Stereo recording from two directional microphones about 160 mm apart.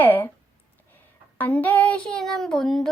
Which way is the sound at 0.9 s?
10° left (ahead or behind).